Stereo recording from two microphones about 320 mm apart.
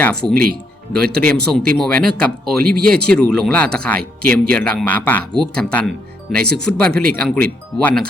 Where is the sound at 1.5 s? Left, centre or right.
Centre.